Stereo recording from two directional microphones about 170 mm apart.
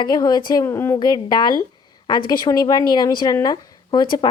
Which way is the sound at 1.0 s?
25° left (ahead or behind).